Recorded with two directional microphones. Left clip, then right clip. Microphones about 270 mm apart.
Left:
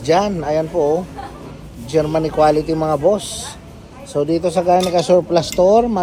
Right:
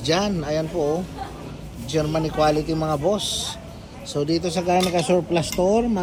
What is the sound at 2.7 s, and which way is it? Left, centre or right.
Speech, left.